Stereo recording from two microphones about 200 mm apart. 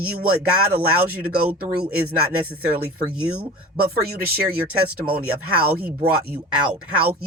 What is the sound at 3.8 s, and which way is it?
Speech, 50° right (ahead or behind).